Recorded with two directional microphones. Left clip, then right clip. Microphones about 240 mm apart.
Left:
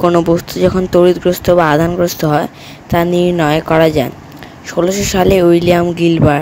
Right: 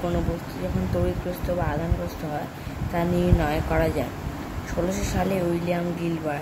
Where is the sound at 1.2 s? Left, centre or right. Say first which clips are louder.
Left 18 dB; left.